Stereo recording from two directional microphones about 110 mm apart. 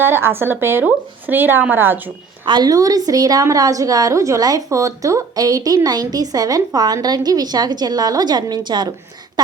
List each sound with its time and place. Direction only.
0.0 s speech: 20° right (ahead or behind)
2.5 s a woman's voice: 35° right (ahead or behind)